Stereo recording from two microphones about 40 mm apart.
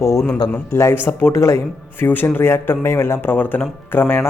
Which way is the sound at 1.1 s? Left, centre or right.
Left.